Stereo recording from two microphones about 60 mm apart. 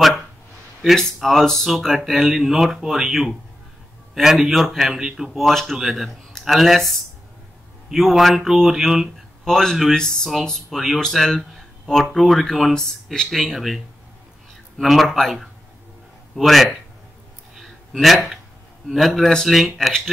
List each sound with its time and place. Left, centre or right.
0.9 s speech: centre
9.5 s speech: centre
17.6 s a sound: centre
18.9 s speech: centre